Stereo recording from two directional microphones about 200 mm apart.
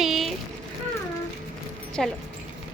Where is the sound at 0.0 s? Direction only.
Centre (ahead or behind).